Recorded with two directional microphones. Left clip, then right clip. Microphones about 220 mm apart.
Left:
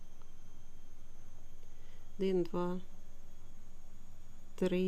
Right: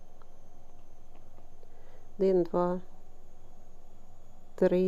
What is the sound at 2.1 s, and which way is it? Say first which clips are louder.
Speech: right 8 dB; 25° left (ahead or behind).